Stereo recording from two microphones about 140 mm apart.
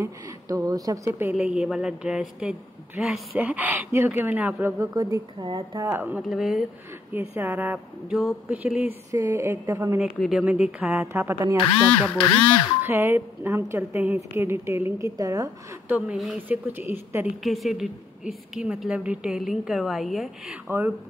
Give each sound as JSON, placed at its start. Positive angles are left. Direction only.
{"t": 0.0, "sound": "speech", "side_deg": -25}
{"t": 1.3, "sound": "a woman's voice", "side_deg": -5}
{"t": 4.9, "sound": "speech", "side_deg": -30}
{"t": 6.2, "sound": "a woman's voice", "side_deg": -5}
{"t": 7.1, "sound": "a woman's voice", "side_deg": -15}
{"t": 10.1, "sound": "a woman's voice", "side_deg": 0}
{"t": 10.4, "sound": "a woman's voice", "side_deg": -10}
{"t": 11.8, "sound": "speech", "side_deg": 15}
{"t": 12.1, "sound": "speech", "side_deg": 25}
{"t": 12.8, "sound": "a woman's voice", "side_deg": -15}
{"t": 15.9, "sound": "a woman's voice", "side_deg": -10}
{"t": 17.4, "sound": "a woman's voice", "side_deg": 0}
{"t": 20.6, "sound": "a woman's voice", "side_deg": -10}